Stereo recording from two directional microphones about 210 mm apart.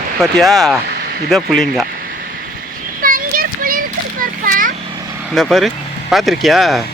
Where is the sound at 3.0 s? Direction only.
40° right (ahead or behind).